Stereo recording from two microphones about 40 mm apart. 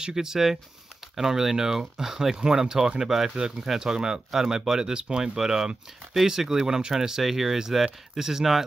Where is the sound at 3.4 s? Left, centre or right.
Centre.